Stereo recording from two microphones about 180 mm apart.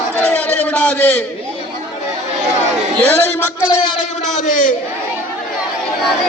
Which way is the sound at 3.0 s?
10° left (ahead or behind).